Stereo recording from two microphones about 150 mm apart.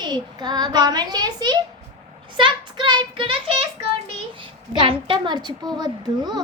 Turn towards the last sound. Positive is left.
turn(degrees=-25)  # may be behind; listen again after turning